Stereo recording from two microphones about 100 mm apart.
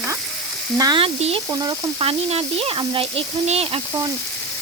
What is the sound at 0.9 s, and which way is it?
Speech, 75° right (ahead or behind).